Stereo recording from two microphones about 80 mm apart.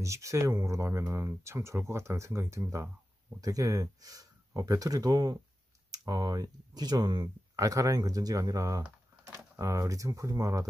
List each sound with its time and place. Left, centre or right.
0.0 s speech: right
3.3 s speech: right
7.5 s speech: right